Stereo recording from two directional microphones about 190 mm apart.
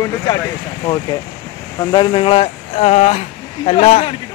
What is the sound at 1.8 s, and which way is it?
Speech, 20° left (ahead or behind).